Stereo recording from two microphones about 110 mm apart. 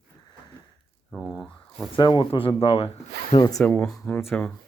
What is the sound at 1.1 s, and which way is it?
Speech, centre (ahead or behind).